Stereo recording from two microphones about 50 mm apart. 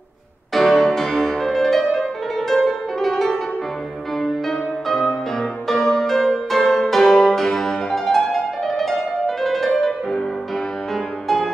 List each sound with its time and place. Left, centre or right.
0.6 s music: centre
11.2 s music: centre